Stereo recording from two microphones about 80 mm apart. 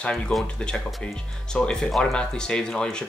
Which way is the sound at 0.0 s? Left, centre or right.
Centre.